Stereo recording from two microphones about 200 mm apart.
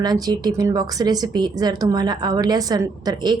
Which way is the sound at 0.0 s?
20° right (ahead or behind).